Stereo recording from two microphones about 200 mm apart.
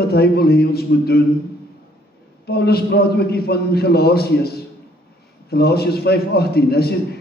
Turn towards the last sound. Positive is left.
turn(degrees=50)  # may be behind; listen again after turning